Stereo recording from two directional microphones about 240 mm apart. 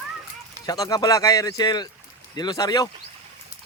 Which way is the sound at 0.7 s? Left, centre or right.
Centre.